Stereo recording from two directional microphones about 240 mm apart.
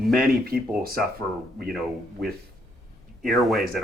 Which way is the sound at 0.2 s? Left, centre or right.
Right.